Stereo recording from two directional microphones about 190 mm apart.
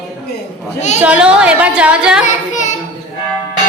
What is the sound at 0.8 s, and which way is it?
Speech, 35° left (ahead or behind).